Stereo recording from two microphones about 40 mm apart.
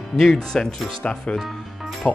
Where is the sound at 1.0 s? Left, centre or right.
Left.